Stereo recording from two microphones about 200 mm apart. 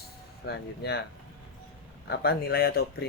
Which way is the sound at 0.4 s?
55° left (ahead or behind).